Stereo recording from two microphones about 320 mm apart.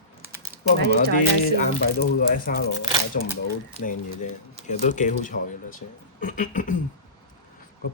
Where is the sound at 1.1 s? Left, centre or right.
Left.